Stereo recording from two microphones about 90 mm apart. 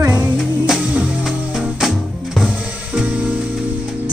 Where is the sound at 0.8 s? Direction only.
15° right (ahead or behind).